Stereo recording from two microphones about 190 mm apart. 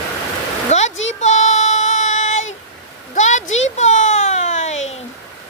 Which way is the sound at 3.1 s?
40° left (ahead or behind).